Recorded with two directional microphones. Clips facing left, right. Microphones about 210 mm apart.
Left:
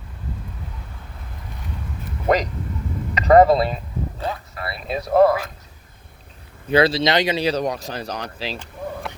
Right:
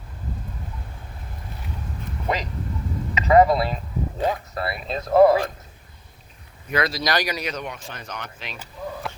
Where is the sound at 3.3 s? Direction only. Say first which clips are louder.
Left 3 dB; 35° left (ahead or behind).